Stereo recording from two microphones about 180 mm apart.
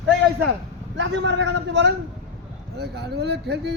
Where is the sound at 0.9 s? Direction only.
85° right.